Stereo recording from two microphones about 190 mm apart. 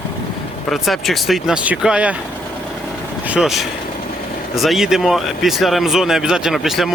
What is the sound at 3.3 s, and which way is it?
Speech, centre (ahead or behind).